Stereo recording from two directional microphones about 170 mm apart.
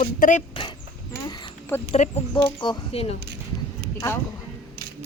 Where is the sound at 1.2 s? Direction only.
25° left (ahead or behind).